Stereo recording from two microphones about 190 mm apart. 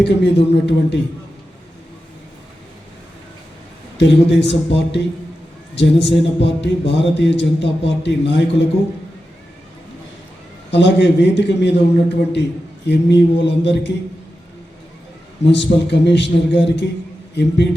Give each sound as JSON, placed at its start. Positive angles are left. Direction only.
{"t": 0.0, "sound": "a man's voice", "side_deg": 65}
{"t": 3.9, "sound": "speech", "side_deg": 65}
{"t": 10.7, "sound": "a man's voice", "side_deg": 65}
{"t": 15.4, "sound": "a man's voice", "side_deg": 65}